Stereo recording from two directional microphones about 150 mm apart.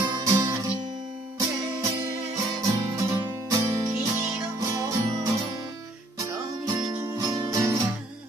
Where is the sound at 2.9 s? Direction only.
20° right (ahead or behind).